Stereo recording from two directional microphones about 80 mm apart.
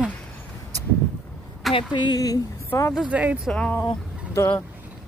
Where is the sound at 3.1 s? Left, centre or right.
Centre.